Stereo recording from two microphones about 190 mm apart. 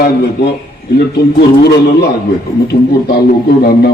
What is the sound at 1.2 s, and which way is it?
Speech, 55° left (ahead or behind).